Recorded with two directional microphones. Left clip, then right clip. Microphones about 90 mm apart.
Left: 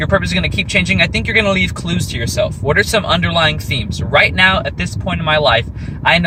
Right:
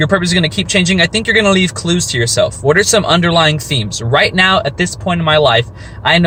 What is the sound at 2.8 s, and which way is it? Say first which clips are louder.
Speech: right 1 dB; 35° right (ahead or behind).